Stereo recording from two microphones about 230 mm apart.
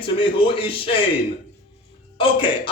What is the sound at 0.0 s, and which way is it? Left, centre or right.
Speech, left.